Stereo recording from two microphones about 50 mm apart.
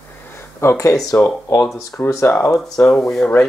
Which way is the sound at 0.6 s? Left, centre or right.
Left.